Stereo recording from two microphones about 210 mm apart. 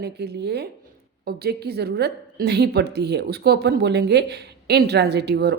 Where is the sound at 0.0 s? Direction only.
50° right (ahead or behind).